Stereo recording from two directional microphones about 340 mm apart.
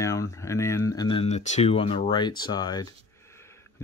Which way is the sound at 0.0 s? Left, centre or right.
Centre.